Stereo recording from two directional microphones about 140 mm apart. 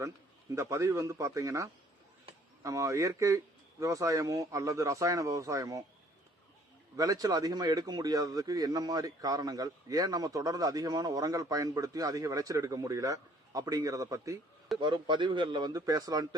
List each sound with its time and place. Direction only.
0.5 s a man's voice: 20° right (ahead or behind)
2.6 s a man's voice: 25° right (ahead or behind)
6.9 s a man's voice: 25° right (ahead or behind)
14.8 s speech: 35° right (ahead or behind)